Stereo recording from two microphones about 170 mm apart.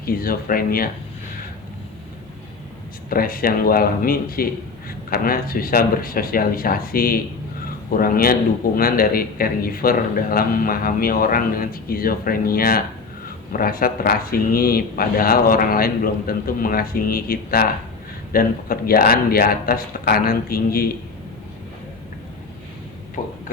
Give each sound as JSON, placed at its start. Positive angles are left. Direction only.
{"t": 0.0, "sound": "a man's voice", "side_deg": 60}
{"t": 3.1, "sound": "a man's voice", "side_deg": 60}
{"t": 23.2, "sound": "speech", "side_deg": 45}